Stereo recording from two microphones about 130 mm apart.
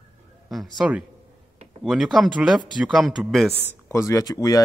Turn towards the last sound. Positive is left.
turn(degrees=30)  # may be behind; listen again after turning